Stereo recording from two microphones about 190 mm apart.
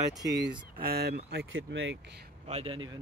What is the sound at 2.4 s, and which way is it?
Speech, 30° right (ahead or behind).